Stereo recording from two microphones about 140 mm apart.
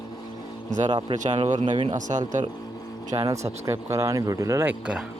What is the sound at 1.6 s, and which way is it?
Speech, 35° right (ahead or behind).